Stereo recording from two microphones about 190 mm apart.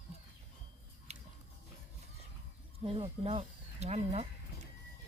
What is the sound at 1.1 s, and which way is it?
Biting, 35° right (ahead or behind).